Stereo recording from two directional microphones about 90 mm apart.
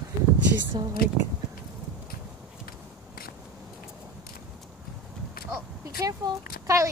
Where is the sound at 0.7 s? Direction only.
65° right (ahead or behind).